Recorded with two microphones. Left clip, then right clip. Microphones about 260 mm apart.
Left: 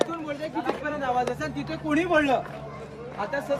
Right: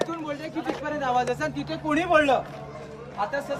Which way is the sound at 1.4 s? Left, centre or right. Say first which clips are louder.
Right 2 dB; centre.